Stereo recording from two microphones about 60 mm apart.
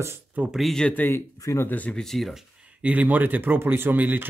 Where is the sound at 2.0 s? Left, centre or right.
Centre.